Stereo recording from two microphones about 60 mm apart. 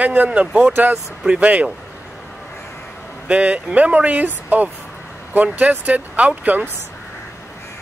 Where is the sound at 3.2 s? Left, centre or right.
Right.